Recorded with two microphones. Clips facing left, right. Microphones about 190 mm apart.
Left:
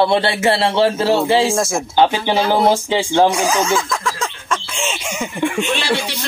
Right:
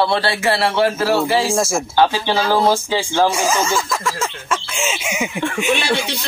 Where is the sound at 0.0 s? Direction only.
20° left (ahead or behind).